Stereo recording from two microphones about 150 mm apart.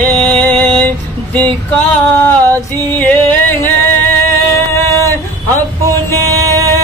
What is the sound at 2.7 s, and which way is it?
Music, 15° left (ahead or behind).